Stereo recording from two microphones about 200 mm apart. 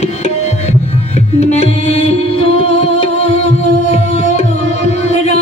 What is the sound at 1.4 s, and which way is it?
Music, 35° left (ahead or behind).